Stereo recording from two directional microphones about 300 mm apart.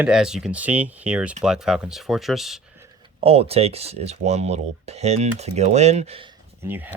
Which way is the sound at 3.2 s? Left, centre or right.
Centre.